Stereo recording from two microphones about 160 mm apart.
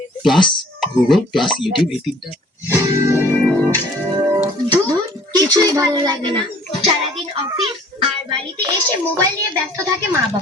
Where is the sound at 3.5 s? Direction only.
10° left (ahead or behind).